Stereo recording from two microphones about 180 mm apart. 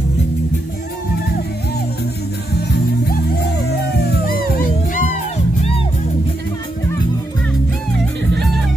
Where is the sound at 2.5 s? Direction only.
60° left (ahead or behind).